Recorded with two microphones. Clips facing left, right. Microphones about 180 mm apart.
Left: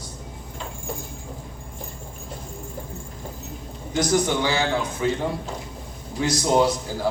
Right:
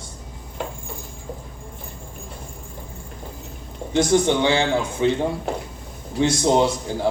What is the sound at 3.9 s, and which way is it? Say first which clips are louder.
A man's voice: right 4 dB; 25° right (ahead or behind).